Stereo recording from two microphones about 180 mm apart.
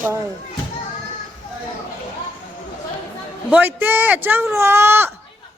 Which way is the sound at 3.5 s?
10° right (ahead or behind).